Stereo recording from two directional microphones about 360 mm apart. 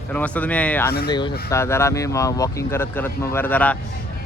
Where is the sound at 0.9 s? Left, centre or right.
Left.